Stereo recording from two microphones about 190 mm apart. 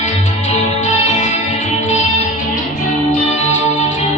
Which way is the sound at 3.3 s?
35° left (ahead or behind).